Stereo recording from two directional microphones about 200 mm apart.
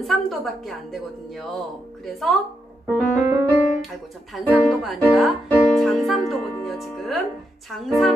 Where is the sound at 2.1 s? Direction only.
Centre (ahead or behind).